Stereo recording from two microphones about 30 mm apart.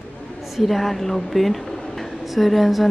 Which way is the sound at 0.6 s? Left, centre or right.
Centre.